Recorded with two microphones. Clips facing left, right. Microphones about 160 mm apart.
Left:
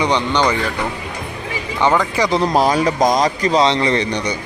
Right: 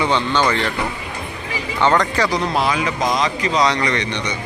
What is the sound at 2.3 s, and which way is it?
Speech, 30° left (ahead or behind).